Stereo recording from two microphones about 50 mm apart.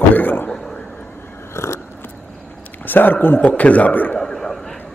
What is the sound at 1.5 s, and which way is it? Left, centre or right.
Scissors, left.